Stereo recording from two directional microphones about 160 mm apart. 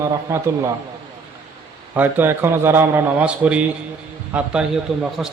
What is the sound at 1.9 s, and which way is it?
A man's voice, 10° right (ahead or behind).